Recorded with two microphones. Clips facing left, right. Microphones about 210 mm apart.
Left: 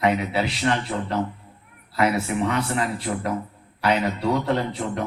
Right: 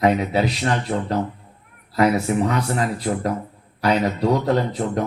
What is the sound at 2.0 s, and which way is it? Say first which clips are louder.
Speech: right 4 dB; 40° right (ahead or behind).